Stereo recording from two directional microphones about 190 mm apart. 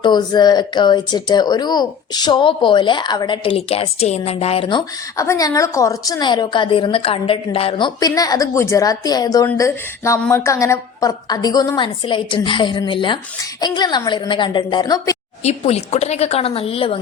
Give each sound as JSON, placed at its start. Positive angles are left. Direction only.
{"t": 0.0, "sound": "speech", "side_deg": 20}
{"t": 5.1, "sound": "speech", "side_deg": 15}
{"t": 15.4, "sound": "a woman's voice", "side_deg": 35}